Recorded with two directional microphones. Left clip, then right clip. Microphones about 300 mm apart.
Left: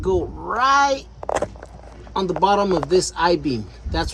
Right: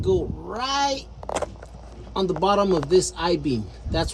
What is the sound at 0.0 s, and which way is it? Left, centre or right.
Speech, centre.